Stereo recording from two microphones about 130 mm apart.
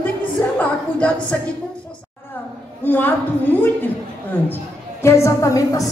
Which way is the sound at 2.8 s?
15° left (ahead or behind).